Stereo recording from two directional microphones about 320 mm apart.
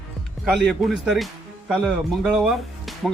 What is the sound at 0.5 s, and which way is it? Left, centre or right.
Speech, centre.